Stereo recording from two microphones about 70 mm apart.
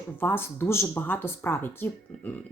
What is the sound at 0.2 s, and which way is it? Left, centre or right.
A woman's voice, left.